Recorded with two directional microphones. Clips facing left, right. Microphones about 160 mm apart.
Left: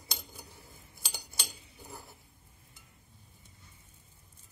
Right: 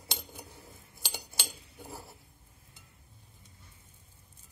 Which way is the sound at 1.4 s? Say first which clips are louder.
Right 3 dB; 30° right (ahead or behind).